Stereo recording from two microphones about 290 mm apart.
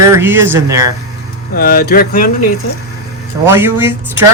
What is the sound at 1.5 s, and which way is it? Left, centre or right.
Speech, left.